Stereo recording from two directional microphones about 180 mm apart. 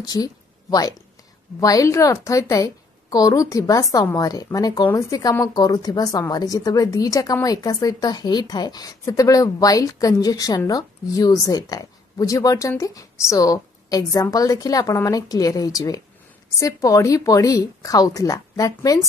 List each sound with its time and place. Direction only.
0.0 s a woman's voice: 20° left (ahead or behind)